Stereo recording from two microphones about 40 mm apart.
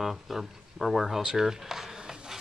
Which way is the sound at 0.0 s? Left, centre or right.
Centre.